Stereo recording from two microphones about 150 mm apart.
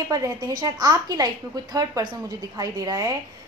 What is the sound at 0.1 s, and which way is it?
A woman's voice, 25° right (ahead or behind).